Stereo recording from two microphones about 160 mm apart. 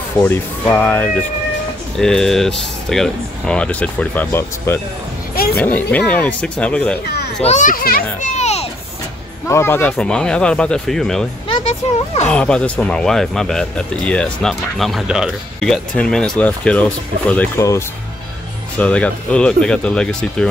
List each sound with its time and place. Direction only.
0.2 s speech: 10° left (ahead or behind)
5.3 s a sound: 70° left (ahead or behind)
5.6 s speech: 10° left (ahead or behind)
7.4 s a child's voice: 50° left (ahead or behind)
8.4 s a sound: 45° left (ahead or behind)
9.5 s speech: 15° left (ahead or behind)
11.4 s a sound: 35° left (ahead or behind)
12.3 s speech: 5° left (ahead or behind)
18.8 s speech: 10° left (ahead or behind)